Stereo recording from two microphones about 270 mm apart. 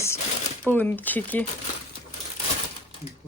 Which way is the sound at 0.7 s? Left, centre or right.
Centre.